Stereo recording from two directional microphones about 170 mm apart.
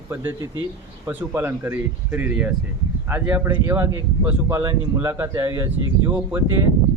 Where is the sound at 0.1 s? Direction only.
10° right (ahead or behind).